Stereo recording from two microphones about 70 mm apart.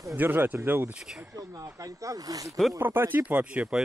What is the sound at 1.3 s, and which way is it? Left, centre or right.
Speech, right.